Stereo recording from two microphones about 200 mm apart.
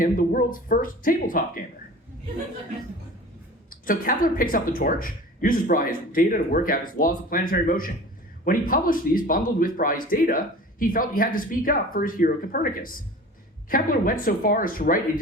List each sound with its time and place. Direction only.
0.0 s speech: 45° left (ahead or behind)
3.7 s speech: 45° left (ahead or behind)